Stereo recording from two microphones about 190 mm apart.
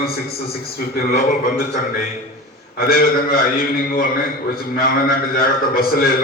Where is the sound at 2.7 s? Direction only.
50° left (ahead or behind).